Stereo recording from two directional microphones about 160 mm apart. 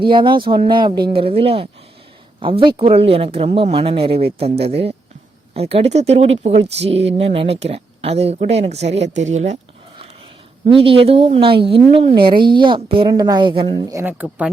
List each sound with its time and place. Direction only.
0.0 s speech: 30° right (ahead or behind); by 9.6 s 45° right (ahead or behind)
10.7 s a woman's voice: 35° right (ahead or behind)
13.9 s speech: 10° right (ahead or behind)